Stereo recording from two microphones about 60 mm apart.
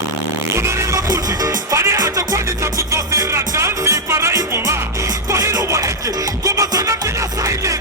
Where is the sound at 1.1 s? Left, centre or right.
Right.